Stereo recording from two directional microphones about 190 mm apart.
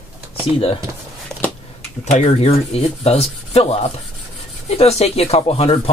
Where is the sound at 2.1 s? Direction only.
35° left (ahead or behind).